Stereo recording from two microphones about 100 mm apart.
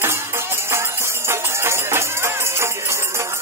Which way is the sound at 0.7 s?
25° right (ahead or behind).